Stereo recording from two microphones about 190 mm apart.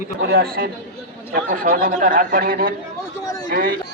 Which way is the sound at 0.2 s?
55° right (ahead or behind).